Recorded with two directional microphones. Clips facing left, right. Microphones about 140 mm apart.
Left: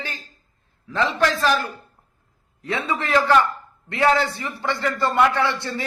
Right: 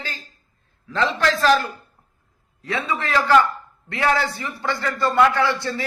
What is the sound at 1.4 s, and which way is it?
Speech, 10° left (ahead or behind).